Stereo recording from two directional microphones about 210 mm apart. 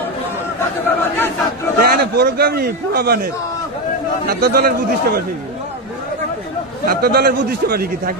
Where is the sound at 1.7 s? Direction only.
45° right (ahead or behind).